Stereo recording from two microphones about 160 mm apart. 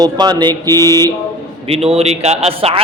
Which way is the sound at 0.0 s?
25° right (ahead or behind).